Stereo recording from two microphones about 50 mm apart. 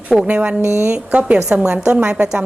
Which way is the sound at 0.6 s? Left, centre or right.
Right.